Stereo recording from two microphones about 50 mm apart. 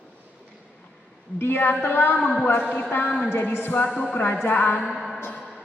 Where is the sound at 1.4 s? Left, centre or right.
Left.